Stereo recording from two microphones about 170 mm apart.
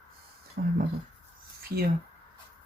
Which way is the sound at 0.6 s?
60° right (ahead or behind).